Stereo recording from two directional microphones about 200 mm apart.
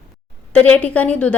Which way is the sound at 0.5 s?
10° left (ahead or behind).